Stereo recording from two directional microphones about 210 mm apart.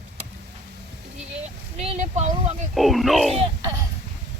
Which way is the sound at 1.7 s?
30° right (ahead or behind).